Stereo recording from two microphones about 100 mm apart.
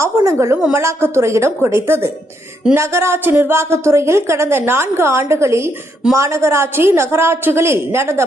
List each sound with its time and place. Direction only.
0.3 s a woman's voice: 30° right (ahead or behind)
0.5 s a woman's voice: 15° right (ahead or behind)